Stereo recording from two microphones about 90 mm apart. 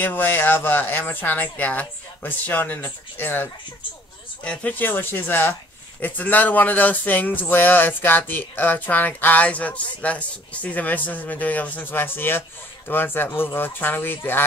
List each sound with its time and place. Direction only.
0.0 s speech: 20° left (ahead or behind)
4.5 s speech: 20° left (ahead or behind)